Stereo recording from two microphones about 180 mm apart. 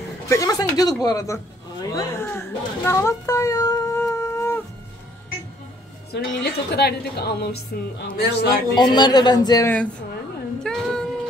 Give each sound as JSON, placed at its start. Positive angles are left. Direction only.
{"t": 0.3, "sound": "speech", "side_deg": 20}
{"t": 6.1, "sound": "a woman's voice", "side_deg": 65}
{"t": 8.7, "sound": "a man's voice", "side_deg": 25}
{"t": 10.6, "sound": "a sound", "side_deg": 5}